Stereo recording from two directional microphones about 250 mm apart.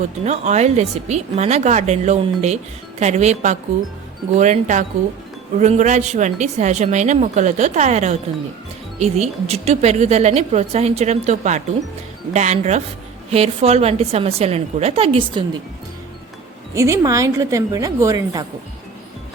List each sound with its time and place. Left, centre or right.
0.3 s a woman's voice: right
16.7 s a woman's voice: centre